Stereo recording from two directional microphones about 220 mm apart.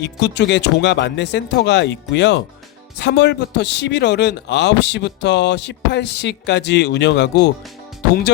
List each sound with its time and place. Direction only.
0.0 s a man's voice: 50° left (ahead or behind)